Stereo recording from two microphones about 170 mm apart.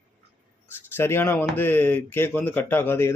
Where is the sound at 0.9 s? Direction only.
15° left (ahead or behind).